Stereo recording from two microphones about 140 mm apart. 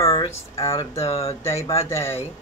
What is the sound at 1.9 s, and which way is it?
Speech, 20° left (ahead or behind).